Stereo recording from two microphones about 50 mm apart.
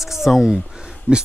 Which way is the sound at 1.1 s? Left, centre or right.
Right.